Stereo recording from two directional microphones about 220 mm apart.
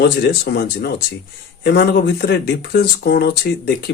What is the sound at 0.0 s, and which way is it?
Speech, 50° left (ahead or behind).